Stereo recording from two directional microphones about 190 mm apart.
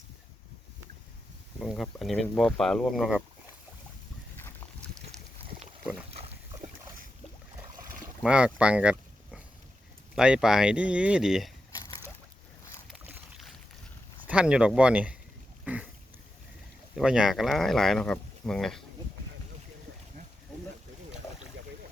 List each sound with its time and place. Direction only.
1.5 s speech: centre (ahead or behind)
4.4 s boat: 10° left (ahead or behind)
6.1 s pig: 30° right (ahead or behind)
8.2 s a sound: 5° right (ahead or behind)
10.2 s speech: 5° right (ahead or behind)
11.7 s slosh: 20° left (ahead or behind)
12.9 s boat: centre (ahead or behind)
14.3 s speech: 5° right (ahead or behind)
15.6 s a sound: 5° right (ahead or behind)
16.9 s speech: centre (ahead or behind)